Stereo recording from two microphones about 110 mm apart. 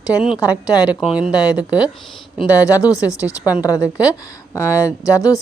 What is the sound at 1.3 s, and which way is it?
Speech, 30° left (ahead or behind).